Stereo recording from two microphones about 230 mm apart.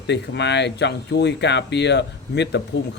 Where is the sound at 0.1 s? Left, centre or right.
Left.